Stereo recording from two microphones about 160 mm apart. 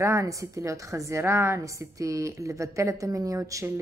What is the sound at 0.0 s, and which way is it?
A woman's voice, 20° right (ahead or behind).